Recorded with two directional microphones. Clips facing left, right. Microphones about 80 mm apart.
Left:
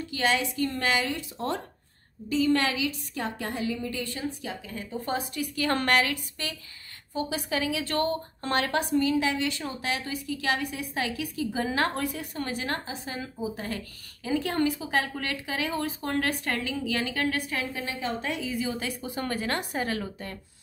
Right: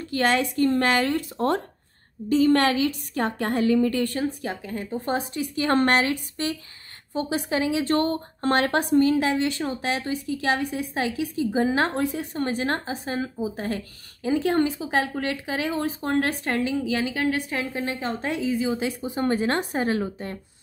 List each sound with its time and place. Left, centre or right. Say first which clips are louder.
0.1 s a woman's voice: right 5 dB; right
17.8 s a woman's voice: right 3 dB; right